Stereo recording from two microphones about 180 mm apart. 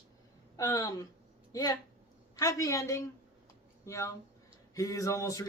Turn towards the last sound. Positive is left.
turn(degrees=15)  # may be behind; listen again after turning